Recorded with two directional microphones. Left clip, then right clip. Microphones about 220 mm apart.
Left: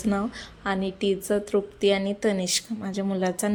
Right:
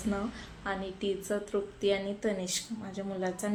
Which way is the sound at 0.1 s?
40° left (ahead or behind).